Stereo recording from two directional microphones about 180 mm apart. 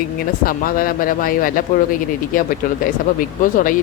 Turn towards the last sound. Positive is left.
turn(degrees=50)  # may be behind; listen again after turning